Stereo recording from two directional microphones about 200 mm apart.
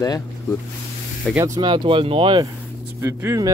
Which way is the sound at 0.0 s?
15° left (ahead or behind).